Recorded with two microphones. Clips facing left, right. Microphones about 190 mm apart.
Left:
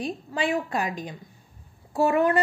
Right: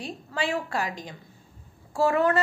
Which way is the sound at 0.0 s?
20° left (ahead or behind).